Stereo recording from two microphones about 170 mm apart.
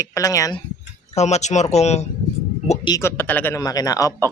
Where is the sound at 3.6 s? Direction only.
20° left (ahead or behind).